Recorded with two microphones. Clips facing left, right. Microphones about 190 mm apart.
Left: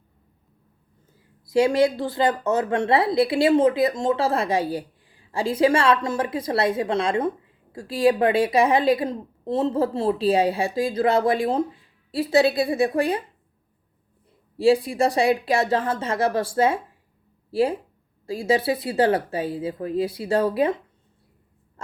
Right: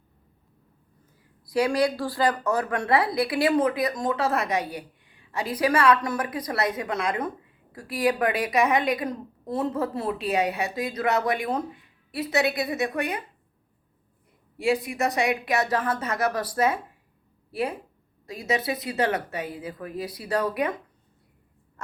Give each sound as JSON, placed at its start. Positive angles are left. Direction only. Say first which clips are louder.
{"t": 1.5, "sound": "a woman's voice", "louder": "left 4 dB", "side_deg": 25}
{"t": 14.5, "sound": "a woman's voice", "louder": "left 6 dB", "side_deg": 30}